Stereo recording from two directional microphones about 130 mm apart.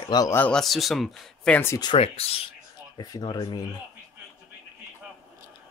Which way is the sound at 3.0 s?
30° left (ahead or behind).